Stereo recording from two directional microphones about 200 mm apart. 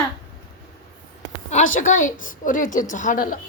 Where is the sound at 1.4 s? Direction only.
40° left (ahead or behind).